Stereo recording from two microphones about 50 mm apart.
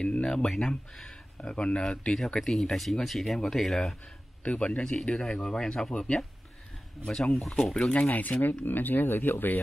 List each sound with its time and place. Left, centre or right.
0.0 s speech: centre
4.5 s speech: left
7.3 s speech: centre
7.9 s speech: left